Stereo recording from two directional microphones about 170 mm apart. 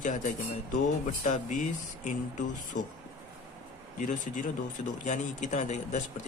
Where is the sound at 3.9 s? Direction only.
50° left (ahead or behind).